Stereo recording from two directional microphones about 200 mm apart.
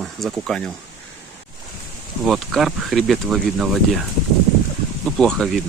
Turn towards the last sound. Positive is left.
turn(degrees=0)  # may be behind; listen again after turning